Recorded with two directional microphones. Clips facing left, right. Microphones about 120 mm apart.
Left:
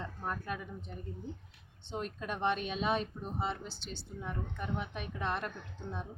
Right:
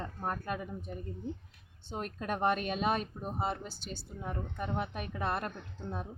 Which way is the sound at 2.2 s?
50° right (ahead or behind).